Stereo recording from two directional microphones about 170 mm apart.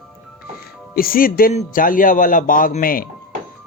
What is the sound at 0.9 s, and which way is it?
Speech, 60° left (ahead or behind).